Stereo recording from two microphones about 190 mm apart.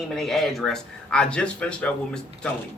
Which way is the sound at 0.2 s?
Centre (ahead or behind).